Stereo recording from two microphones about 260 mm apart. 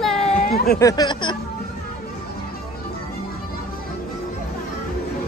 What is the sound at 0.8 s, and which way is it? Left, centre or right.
Speech, centre.